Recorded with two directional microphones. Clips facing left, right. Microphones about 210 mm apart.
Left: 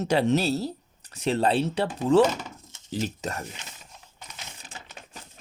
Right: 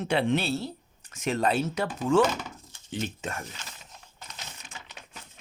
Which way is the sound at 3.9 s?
5° left (ahead or behind).